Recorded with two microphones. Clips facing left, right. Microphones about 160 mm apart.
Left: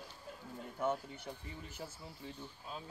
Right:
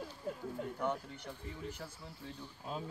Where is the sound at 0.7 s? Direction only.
5° left (ahead or behind).